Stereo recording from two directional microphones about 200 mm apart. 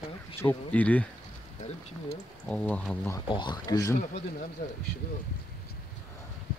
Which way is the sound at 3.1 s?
25° left (ahead or behind).